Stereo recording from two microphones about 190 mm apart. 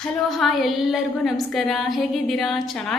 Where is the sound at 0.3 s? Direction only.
Centre (ahead or behind).